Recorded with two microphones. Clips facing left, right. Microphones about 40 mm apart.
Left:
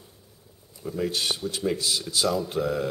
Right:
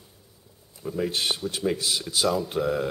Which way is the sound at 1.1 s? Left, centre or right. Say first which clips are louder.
Right 1 dB; right.